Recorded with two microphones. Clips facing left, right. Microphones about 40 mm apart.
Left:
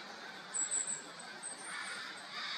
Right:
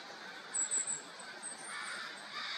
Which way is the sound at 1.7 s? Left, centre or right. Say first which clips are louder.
Right 1 dB; centre.